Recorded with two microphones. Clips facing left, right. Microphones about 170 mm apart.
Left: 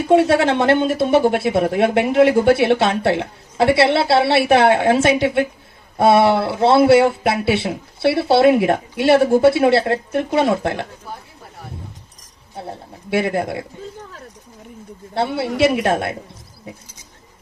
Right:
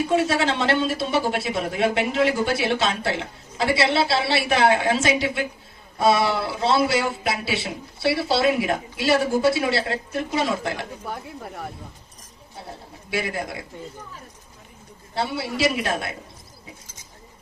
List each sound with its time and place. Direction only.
0.1 s speech: 60° left (ahead or behind)
11.1 s speech: 65° right (ahead or behind)
13.1 s speech: 55° left (ahead or behind)
15.1 s speech: 60° left (ahead or behind)